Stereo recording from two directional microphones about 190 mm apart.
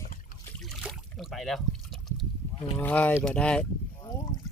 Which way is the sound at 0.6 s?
Centre (ahead or behind).